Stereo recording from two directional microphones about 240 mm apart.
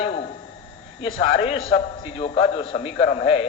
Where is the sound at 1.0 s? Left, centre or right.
Left.